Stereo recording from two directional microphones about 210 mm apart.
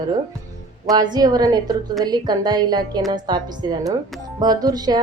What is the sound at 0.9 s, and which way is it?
A woman's voice, 20° right (ahead or behind).